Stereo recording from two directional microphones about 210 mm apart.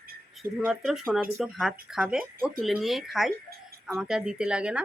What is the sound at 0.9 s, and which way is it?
A woman's voice, centre (ahead or behind).